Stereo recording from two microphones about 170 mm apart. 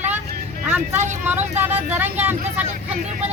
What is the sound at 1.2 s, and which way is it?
A woman's voice, 10° right (ahead or behind).